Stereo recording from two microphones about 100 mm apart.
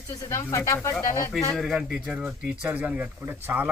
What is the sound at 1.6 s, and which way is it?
Speech, 5° right (ahead or behind).